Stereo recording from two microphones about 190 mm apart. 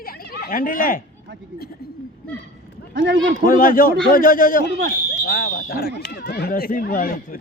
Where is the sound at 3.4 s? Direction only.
45° left (ahead or behind).